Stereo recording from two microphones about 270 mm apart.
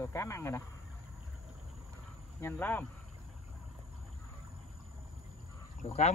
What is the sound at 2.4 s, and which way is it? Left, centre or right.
Speech, centre.